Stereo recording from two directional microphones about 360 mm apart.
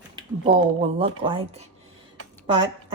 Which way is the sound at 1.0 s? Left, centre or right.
Centre.